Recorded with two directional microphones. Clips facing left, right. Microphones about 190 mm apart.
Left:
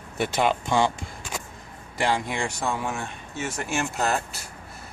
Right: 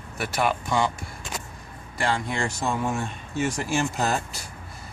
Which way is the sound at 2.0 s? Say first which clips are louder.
Left 1 dB; 15° left (ahead or behind).